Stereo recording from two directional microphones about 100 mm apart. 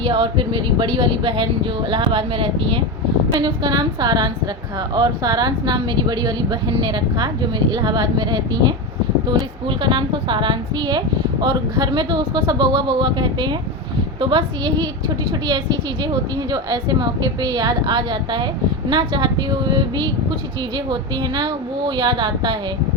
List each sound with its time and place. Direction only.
0.0 s speech: 60° right (ahead or behind)
3.3 s a woman's voice: 45° right (ahead or behind)
9.3 s a woman's voice: 55° right (ahead or behind)